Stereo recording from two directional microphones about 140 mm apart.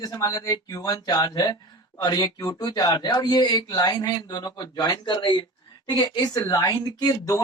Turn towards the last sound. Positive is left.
turn(degrees=25)  # may be behind; listen again after turning